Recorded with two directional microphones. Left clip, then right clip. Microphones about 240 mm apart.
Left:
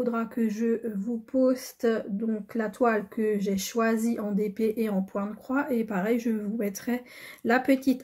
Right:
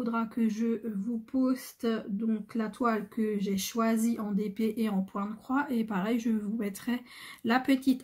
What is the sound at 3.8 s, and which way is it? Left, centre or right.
Speech, right.